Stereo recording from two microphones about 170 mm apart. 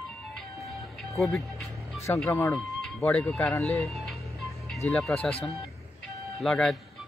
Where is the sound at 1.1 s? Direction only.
Centre (ahead or behind).